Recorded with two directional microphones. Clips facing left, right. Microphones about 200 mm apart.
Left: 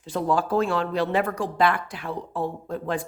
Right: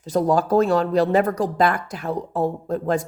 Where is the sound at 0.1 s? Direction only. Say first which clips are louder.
Right 5 dB; 40° right (ahead or behind).